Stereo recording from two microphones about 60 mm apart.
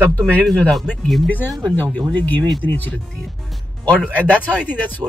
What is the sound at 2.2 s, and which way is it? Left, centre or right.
Speech, left.